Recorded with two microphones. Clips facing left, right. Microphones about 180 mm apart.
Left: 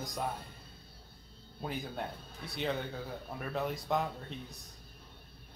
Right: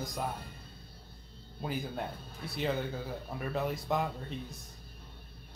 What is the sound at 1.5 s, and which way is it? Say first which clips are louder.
Speech: right 2 dB; centre (ahead or behind).